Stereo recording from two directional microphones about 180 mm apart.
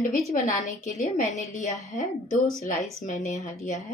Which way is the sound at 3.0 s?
40° left (ahead or behind).